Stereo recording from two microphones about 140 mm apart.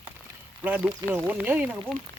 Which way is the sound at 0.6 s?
10° right (ahead or behind).